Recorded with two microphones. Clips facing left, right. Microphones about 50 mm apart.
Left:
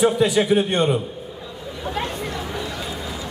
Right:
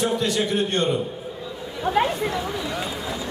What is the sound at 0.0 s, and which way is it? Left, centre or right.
Speech, centre.